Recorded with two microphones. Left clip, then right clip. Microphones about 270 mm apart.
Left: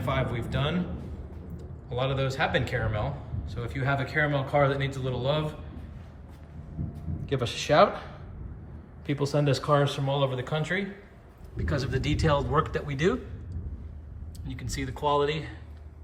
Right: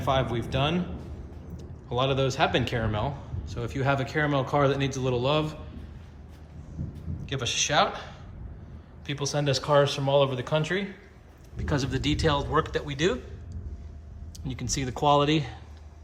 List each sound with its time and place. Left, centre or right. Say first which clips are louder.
0.1 s a man's voice: right 4 dB; centre
7.3 s a man's voice: left 1 dB; centre
9.0 s a man's voice: left 1 dB; centre
14.4 s a man's voice: right 4 dB; centre